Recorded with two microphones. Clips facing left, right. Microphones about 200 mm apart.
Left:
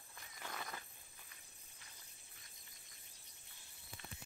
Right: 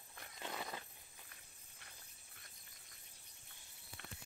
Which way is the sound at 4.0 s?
60° right (ahead or behind).